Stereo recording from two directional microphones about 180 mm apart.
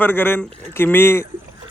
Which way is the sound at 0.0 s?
10° left (ahead or behind).